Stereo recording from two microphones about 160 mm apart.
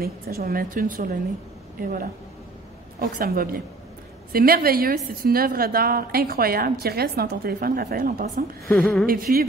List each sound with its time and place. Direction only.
0.0 s a woman's voice: 70° right (ahead or behind)
8.6 s speech: 5° left (ahead or behind)
9.0 s a woman's voice: 65° right (ahead or behind)